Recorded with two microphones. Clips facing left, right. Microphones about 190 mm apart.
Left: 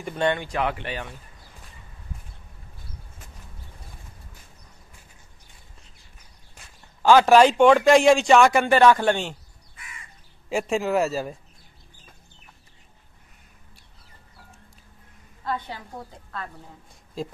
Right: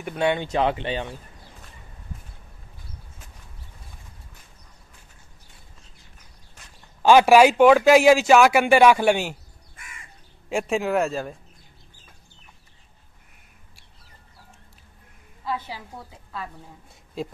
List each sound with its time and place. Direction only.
0.0 s speech: 5° right (ahead or behind)
0.4 s speech: 25° right (ahead or behind)
7.0 s speech: 15° right (ahead or behind)
10.5 s a man's voice: centre (ahead or behind)
15.4 s a man's voice: 5° right (ahead or behind)